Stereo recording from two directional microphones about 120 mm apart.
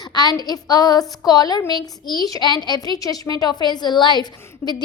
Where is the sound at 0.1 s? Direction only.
35° left (ahead or behind).